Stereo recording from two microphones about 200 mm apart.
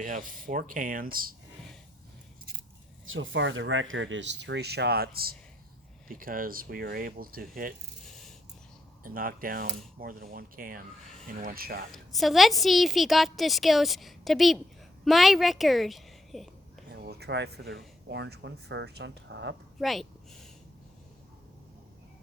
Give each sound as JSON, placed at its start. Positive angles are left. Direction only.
{"t": 0.0, "sound": "speech", "side_deg": -45}
{"t": 3.1, "sound": "speech", "side_deg": -80}
{"t": 9.0, "sound": "speech", "side_deg": -45}
{"t": 11.9, "sound": "a woman's voice", "side_deg": 0}
{"t": 16.9, "sound": "speech", "side_deg": -55}
{"t": 19.8, "sound": "speech", "side_deg": 0}